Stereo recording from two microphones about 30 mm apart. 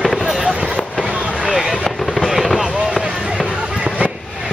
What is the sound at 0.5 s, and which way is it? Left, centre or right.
Vehicle, right.